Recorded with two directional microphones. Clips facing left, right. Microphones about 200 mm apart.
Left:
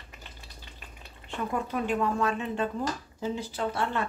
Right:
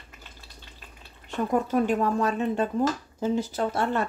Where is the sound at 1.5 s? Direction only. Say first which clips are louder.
Right 6 dB; 40° right (ahead or behind).